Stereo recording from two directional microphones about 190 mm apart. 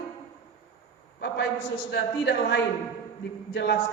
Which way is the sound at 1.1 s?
60° left (ahead or behind).